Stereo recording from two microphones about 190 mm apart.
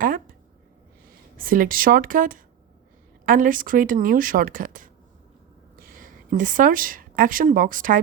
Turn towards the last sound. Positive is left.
turn(degrees=-45)  # may be behind; listen again after turning